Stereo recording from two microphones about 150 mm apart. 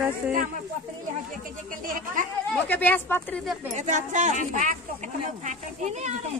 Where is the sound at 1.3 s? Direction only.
65° right (ahead or behind).